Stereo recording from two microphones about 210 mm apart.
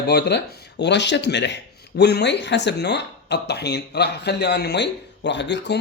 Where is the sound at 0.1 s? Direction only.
55° left (ahead or behind).